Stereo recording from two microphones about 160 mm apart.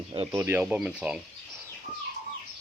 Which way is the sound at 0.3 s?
15° right (ahead or behind).